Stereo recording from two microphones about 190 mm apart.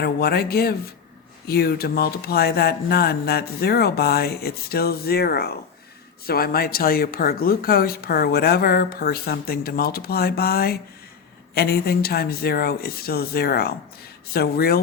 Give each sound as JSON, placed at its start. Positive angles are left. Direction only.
{"t": 0.0, "sound": "speech", "side_deg": 55}